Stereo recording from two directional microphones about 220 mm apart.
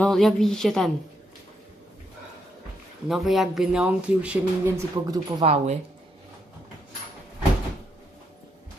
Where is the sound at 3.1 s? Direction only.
Centre (ahead or behind).